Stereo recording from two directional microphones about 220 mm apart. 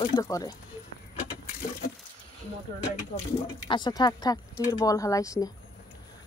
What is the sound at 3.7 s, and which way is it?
Speech, 20° left (ahead or behind).